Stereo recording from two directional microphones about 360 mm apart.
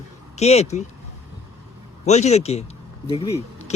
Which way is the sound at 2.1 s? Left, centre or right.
Centre.